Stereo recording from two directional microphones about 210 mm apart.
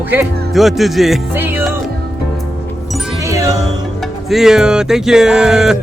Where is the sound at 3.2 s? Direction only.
15° right (ahead or behind).